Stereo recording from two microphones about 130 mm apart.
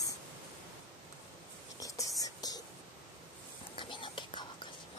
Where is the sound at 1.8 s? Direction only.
25° left (ahead or behind).